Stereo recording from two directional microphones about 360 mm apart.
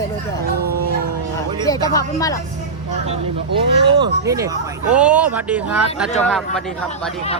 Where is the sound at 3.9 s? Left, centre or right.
Centre.